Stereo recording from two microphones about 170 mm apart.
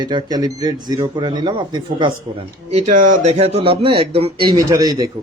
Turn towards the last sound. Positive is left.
turn(degrees=-20)  # may be behind; listen again after turning